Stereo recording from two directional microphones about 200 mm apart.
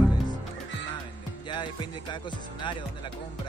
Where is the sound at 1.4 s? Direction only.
25° left (ahead or behind).